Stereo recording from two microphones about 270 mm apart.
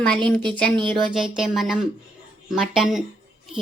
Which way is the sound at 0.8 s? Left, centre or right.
Centre.